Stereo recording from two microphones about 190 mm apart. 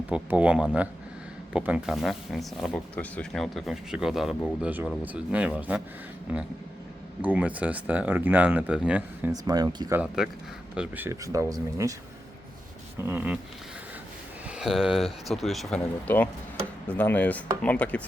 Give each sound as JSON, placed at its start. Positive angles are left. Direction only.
{"t": 0.1, "sound": "speech", "side_deg": -5}
{"t": 7.2, "sound": "speech", "side_deg": -10}
{"t": 9.3, "sound": "speech", "side_deg": -20}
{"t": 13.0, "sound": "speech", "side_deg": -10}
{"t": 14.5, "sound": "speech", "side_deg": 0}